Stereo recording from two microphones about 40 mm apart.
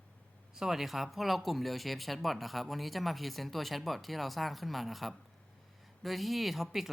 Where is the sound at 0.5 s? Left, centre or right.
Centre.